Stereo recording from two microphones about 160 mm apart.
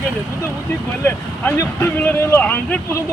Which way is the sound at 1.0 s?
15° left (ahead or behind).